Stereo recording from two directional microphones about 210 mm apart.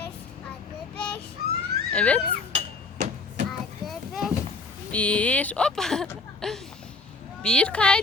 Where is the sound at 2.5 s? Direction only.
35° right (ahead or behind).